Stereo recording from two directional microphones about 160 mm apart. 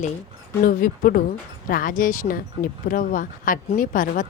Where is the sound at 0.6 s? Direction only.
60° left (ahead or behind).